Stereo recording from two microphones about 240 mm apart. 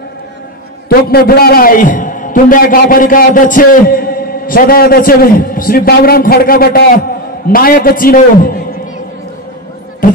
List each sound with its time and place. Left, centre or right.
0.8 s a man's voice: left
10.0 s speech: left